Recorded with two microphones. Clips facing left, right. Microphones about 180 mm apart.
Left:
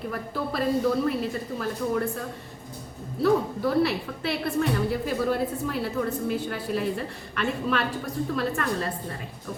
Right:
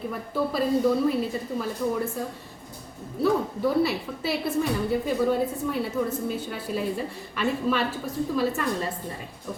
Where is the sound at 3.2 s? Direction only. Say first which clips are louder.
Left 1 dB; centre (ahead or behind).